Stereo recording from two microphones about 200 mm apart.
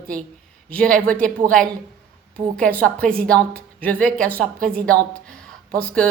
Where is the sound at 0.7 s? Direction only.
5° left (ahead or behind).